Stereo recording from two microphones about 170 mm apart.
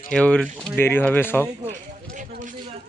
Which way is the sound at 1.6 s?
50° right (ahead or behind).